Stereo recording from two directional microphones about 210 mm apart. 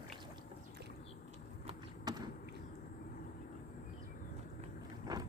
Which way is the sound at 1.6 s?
20° right (ahead or behind).